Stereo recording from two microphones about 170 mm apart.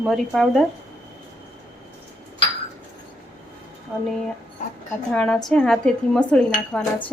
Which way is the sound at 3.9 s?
5° right (ahead or behind).